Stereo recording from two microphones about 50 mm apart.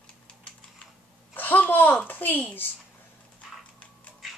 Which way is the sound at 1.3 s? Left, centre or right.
Left.